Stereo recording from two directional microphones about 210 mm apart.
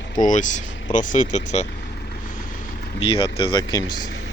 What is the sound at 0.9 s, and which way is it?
Speech, 40° left (ahead or behind).